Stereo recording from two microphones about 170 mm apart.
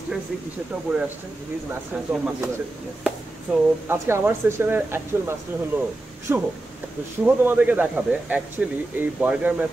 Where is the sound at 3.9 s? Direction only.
15° right (ahead or behind).